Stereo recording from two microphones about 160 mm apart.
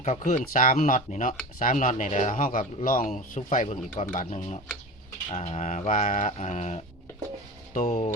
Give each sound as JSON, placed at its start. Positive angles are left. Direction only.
{"t": 0.0, "sound": "speech", "side_deg": 50}